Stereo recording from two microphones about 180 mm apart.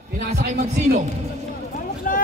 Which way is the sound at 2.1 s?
50° left (ahead or behind).